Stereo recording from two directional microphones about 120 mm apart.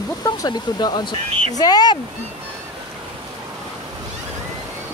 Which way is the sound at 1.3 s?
55° right (ahead or behind).